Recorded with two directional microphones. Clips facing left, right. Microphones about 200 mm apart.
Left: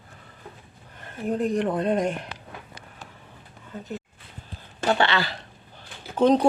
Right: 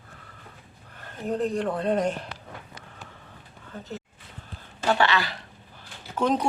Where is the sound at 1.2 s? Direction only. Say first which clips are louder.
Left 2 dB; 10° left (ahead or behind).